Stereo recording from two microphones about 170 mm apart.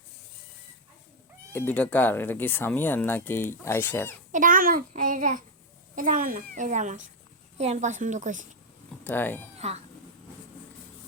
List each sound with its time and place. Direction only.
1.5 s speech: 10° left (ahead or behind)
4.3 s a child's voice: 50° right (ahead or behind)
9.0 s speech: 10° left (ahead or behind)
9.6 s speech: 40° right (ahead or behind)